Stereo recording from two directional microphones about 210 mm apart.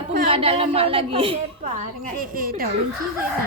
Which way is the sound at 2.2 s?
45° right (ahead or behind).